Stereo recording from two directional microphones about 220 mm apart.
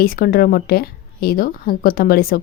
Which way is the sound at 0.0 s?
40° left (ahead or behind).